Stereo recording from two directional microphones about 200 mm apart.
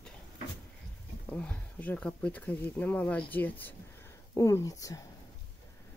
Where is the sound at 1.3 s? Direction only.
5° left (ahead or behind).